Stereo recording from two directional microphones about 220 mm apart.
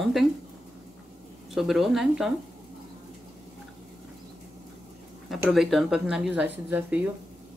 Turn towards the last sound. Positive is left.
turn(degrees=-10)  # may be behind; listen again after turning